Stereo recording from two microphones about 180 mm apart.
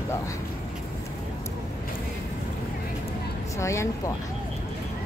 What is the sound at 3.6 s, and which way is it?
Speech, 15° left (ahead or behind).